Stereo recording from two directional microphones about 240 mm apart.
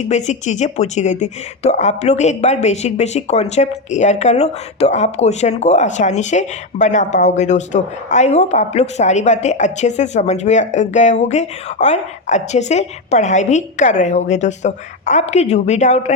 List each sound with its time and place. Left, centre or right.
0.0 s a woman's voice: left